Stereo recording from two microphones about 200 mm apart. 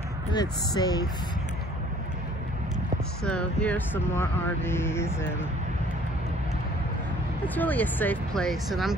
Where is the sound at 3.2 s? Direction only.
5° left (ahead or behind).